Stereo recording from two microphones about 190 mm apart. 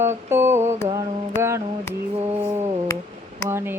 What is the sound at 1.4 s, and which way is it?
Mantra, 15° right (ahead or behind).